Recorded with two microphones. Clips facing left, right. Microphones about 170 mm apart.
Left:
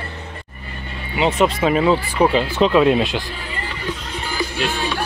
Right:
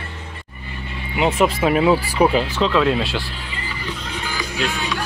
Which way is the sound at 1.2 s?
Centre (ahead or behind).